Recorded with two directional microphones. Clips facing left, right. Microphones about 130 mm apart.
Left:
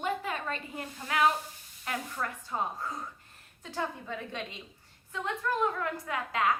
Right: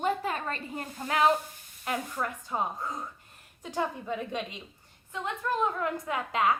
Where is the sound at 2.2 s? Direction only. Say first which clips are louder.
Right 2 dB; 15° right (ahead or behind).